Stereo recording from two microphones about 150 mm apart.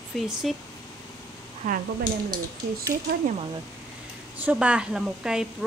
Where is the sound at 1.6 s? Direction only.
55° right (ahead or behind).